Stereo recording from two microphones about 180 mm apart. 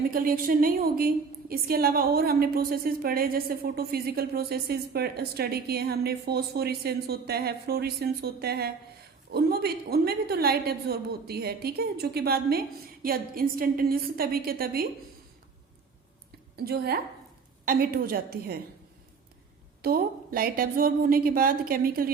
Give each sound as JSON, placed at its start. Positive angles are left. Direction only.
{"t": 0.1, "sound": "a woman's voice", "side_deg": -55}
{"t": 16.6, "sound": "a woman's voice", "side_deg": -60}
{"t": 19.8, "sound": "a woman's voice", "side_deg": -55}